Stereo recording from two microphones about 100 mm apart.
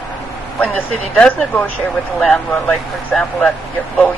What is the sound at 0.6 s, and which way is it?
Speech, 10° left (ahead or behind).